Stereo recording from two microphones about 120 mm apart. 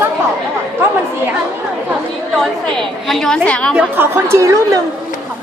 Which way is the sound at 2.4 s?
5° left (ahead or behind).